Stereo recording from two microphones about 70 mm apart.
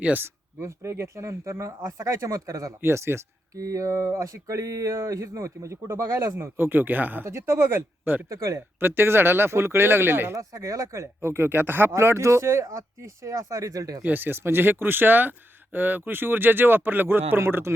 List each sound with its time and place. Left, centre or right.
0.0 s speech: right
0.6 s speech: right
2.8 s speech: right
6.3 s speech: right
7.3 s speech: right
8.3 s speech: right
8.8 s speech: right
10.3 s speech: right
11.2 s speech: right
14.0 s speech: right